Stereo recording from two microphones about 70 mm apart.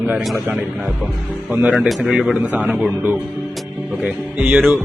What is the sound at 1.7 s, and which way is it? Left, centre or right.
Speech, centre.